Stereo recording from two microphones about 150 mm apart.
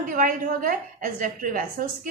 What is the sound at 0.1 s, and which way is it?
A woman's voice, 70° right (ahead or behind).